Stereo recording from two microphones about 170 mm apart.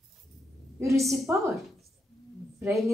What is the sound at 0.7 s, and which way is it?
Speech, 15° right (ahead or behind).